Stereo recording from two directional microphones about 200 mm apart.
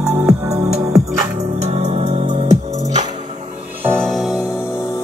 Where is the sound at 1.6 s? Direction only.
35° right (ahead or behind).